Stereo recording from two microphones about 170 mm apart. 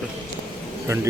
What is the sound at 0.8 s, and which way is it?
Speech, 15° right (ahead or behind).